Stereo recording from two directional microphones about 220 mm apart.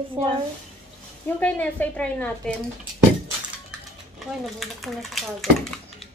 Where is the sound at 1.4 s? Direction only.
5° left (ahead or behind).